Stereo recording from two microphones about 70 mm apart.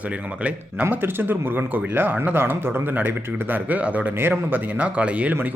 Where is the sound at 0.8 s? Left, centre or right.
Right.